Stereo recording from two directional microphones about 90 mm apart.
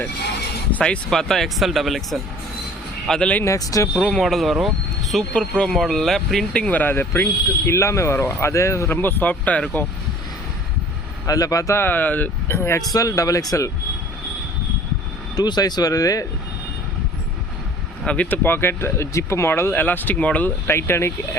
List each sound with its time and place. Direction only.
0.7 s speech: 10° left (ahead or behind)
3.1 s speech: 10° left (ahead or behind)
3.4 s speech: 40° left (ahead or behind)
4.0 s speech: 5° left (ahead or behind)
4.6 s vehicle: centre (ahead or behind)
5.3 s speech: 10° left (ahead or behind)
11.3 s speech: 40° left (ahead or behind)
11.8 s speech: 20° left (ahead or behind)
12.5 s speech: 30° left (ahead or behind)
15.4 s speech: 50° left (ahead or behind)
18.0 s speech: 15° left (ahead or behind)